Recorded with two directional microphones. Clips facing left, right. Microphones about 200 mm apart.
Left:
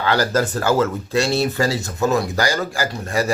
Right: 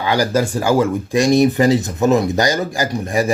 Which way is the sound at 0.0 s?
10° right (ahead or behind).